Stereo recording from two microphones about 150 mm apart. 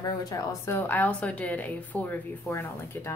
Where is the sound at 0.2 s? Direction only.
20° left (ahead or behind).